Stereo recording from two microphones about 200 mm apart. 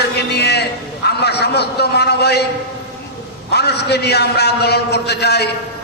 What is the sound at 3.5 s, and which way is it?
A man's voice, 55° left (ahead or behind).